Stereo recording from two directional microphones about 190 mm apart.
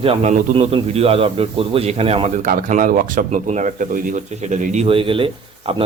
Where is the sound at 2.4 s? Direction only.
45° right (ahead or behind).